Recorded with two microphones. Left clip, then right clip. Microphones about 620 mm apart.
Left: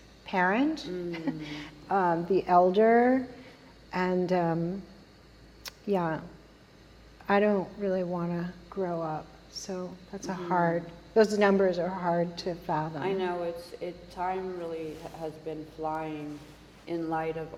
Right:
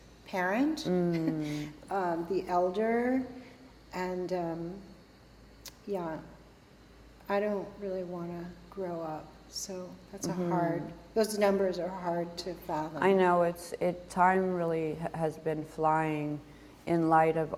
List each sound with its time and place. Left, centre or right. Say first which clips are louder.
0.3 s speech: left 4 dB; left
5.6 s a sound: left 7 dB; left
7.3 s speech: left 6 dB; left
13.0 s a woman's voice: right 6 dB; right